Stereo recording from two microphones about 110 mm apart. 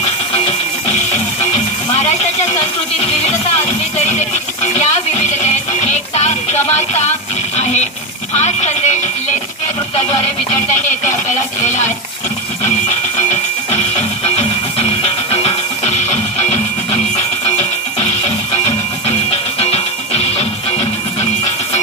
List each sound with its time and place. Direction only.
5.4 s music: 90° left
8.4 s radio: 90° left
13.3 s music: 75° left (ahead or behind)
19.6 s music: 70° left (ahead or behind)